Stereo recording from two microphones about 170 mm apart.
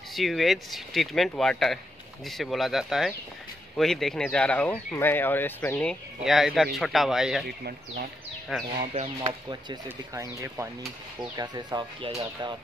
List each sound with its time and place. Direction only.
0.1 s speech: centre (ahead or behind)
7.4 s speech: 65° right (ahead or behind)
8.5 s speech: centre (ahead or behind)
8.9 s speech: 40° right (ahead or behind)
9.8 s speech: 15° right (ahead or behind)